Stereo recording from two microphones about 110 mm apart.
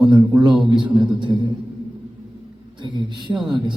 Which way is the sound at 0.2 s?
35° right (ahead or behind).